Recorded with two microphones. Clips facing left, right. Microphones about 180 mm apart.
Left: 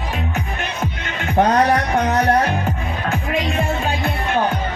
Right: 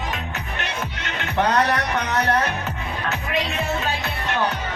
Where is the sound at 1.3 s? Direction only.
45° left (ahead or behind).